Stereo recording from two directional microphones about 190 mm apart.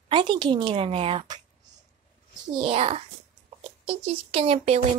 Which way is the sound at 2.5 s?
30° right (ahead or behind).